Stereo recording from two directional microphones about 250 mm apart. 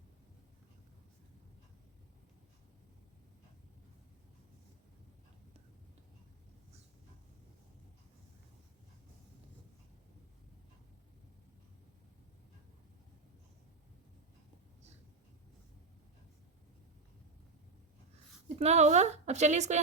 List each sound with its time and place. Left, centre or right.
18.4 s a woman's voice: right